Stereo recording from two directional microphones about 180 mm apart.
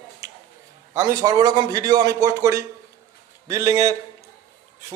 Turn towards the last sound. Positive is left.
turn(degrees=-20)  # may be behind; listen again after turning